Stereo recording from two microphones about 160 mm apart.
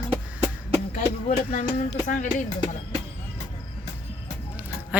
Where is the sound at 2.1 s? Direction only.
55° left (ahead or behind).